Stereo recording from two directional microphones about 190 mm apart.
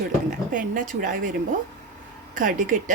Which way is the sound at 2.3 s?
45° right (ahead or behind).